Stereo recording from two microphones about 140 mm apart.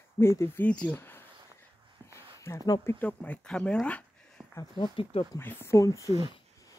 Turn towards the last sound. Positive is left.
turn(degrees=20)  # may be behind; listen again after turning